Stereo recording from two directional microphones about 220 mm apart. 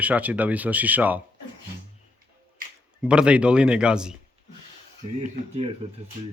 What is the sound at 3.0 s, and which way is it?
Speech, 5° right (ahead or behind).